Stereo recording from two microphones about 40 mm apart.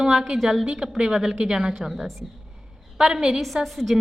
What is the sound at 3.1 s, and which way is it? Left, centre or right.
Speech, centre.